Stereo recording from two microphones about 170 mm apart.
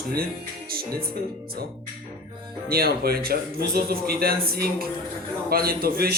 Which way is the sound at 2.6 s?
65° right (ahead or behind).